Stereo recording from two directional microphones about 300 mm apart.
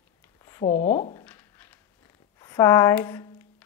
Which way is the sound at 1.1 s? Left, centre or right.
Centre.